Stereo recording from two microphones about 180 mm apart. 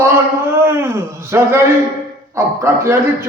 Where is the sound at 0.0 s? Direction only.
10° right (ahead or behind).